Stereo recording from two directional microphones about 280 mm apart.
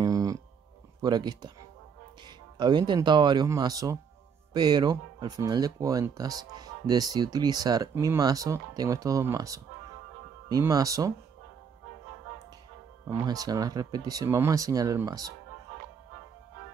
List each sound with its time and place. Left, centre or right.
0.0 s a sound: centre
1.0 s speech: centre
13.1 s speech: centre